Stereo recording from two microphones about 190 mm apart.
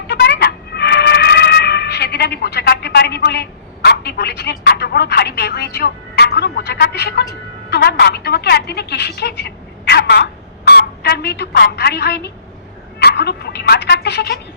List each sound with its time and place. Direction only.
0.1 s music: 60° left (ahead or behind)
7.7 s a woman's voice: 60° left (ahead or behind)